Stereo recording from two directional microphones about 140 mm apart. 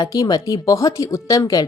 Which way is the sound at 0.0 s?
25° left (ahead or behind).